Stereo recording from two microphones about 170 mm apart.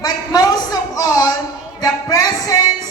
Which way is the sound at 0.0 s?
20° left (ahead or behind).